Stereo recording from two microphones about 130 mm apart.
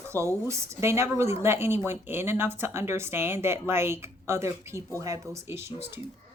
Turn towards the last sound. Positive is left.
turn(degrees=-20)  # may be behind; listen again after turning